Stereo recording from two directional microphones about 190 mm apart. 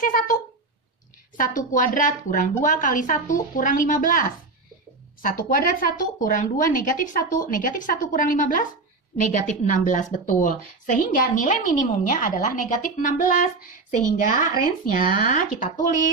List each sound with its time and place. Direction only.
0.0 s a woman's voice: 45° left (ahead or behind)